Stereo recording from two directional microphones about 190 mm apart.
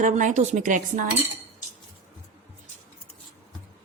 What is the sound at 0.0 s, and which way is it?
Speech, 40° right (ahead or behind).